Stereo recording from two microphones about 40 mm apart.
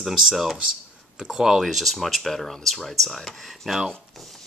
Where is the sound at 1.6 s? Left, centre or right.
Centre.